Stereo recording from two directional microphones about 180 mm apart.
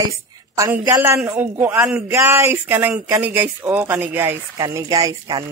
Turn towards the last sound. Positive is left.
turn(degrees=-20)  # may be behind; listen again after turning